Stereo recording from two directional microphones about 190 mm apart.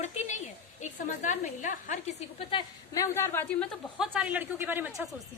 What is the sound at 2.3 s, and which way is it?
A woman's voice, 20° left (ahead or behind).